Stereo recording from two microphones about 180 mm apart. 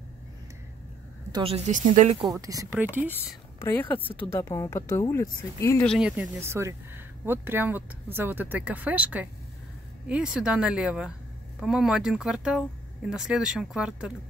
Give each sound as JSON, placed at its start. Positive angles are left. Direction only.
{"t": 1.3, "sound": "a woman's voice", "side_deg": -30}
{"t": 1.7, "sound": "speech", "side_deg": -45}
{"t": 2.3, "sound": "speech", "side_deg": -20}
{"t": 3.5, "sound": "speech", "side_deg": 15}
{"t": 4.0, "sound": "speech", "side_deg": 30}
{"t": 4.3, "sound": "speech", "side_deg": 15}
{"t": 5.9, "sound": "speech", "side_deg": -5}